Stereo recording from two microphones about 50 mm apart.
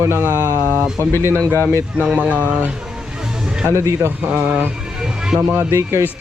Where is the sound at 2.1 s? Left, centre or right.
Right.